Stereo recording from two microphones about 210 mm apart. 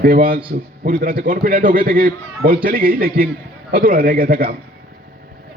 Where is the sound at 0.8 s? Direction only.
45° right (ahead or behind).